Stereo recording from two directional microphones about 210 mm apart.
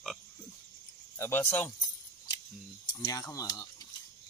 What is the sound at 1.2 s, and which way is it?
Speech, 10° left (ahead or behind).